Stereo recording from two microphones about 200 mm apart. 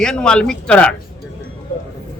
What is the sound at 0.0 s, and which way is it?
Speech, 5° left (ahead or behind).